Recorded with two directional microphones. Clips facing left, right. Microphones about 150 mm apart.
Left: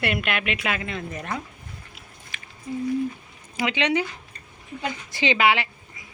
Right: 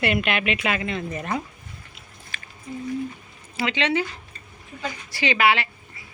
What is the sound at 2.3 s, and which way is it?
Squish, 20° left (ahead or behind).